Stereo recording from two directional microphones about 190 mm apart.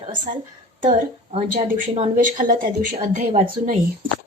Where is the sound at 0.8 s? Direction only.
35° right (ahead or behind).